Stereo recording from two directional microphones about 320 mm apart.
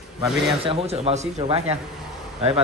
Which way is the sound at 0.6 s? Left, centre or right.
Centre.